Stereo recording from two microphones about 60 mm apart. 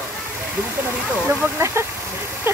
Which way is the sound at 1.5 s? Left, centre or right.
Right.